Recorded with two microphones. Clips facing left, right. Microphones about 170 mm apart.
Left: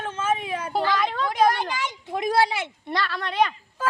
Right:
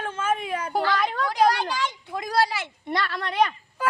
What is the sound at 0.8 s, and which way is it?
A child's voice, 20° left (ahead or behind).